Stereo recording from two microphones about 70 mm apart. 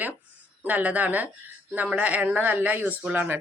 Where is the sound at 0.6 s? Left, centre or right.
Right.